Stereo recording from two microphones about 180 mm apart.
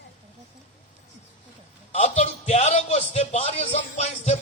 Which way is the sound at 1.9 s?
35° left (ahead or behind).